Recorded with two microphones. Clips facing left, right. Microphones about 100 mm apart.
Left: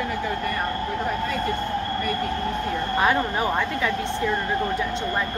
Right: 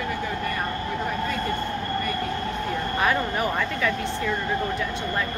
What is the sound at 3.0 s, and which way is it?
Speech, 15° left (ahead or behind).